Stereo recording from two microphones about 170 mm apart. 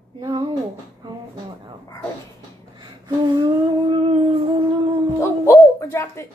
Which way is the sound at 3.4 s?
25° right (ahead or behind).